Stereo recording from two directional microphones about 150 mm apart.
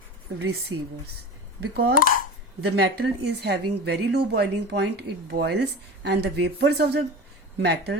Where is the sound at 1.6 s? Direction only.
90° right.